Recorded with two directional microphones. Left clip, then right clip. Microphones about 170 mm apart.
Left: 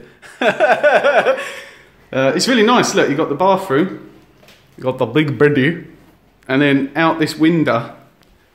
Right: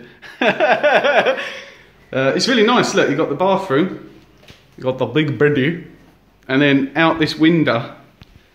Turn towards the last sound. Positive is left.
turn(degrees=10)  # may be behind; listen again after turning